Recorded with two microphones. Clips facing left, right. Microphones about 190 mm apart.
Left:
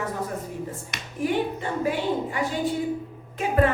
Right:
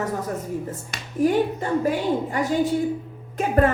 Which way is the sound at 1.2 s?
40° right (ahead or behind).